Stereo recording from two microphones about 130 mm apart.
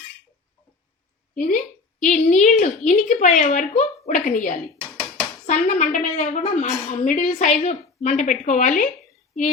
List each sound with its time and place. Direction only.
1.4 s a woman's voice: 80° left
5.5 s a woman's voice: 70° left (ahead or behind)
6.4 s a woman's voice: 65° left (ahead or behind)
7.3 s a woman's voice: 60° left (ahead or behind); by 8.9 s 80° left